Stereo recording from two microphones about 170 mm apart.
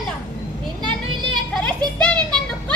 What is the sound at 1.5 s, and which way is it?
Music, 5° left (ahead or behind).